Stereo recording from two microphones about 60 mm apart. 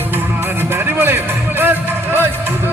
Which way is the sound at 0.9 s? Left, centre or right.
Right.